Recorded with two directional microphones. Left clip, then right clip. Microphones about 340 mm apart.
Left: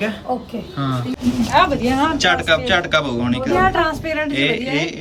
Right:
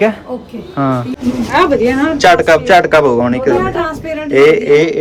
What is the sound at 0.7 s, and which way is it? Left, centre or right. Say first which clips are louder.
Speech: right 10 dB; right.